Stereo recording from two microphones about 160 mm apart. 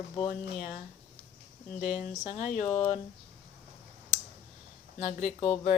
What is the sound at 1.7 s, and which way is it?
Speech, 50° left (ahead or behind).